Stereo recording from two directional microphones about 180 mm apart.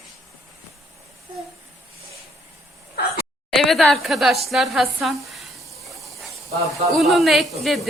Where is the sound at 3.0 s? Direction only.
60° left (ahead or behind).